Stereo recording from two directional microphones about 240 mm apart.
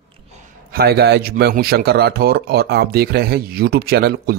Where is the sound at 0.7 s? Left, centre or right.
Right.